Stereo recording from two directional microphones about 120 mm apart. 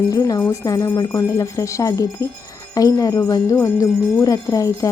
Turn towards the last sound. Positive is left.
turn(degrees=30)  # may be behind; listen again after turning